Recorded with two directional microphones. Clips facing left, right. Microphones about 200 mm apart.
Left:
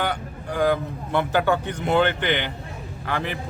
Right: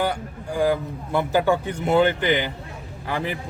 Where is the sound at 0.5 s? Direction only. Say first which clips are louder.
Even; 10° right (ahead or behind).